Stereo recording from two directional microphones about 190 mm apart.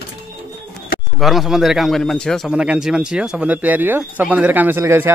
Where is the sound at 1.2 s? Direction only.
Centre (ahead or behind).